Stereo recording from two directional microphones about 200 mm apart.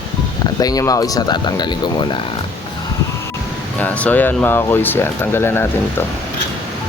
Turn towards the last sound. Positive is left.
turn(degrees=10)  # may be behind; listen again after turning